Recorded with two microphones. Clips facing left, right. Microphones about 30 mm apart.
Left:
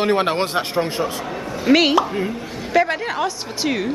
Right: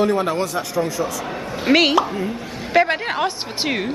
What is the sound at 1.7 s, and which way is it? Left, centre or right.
Speech, centre.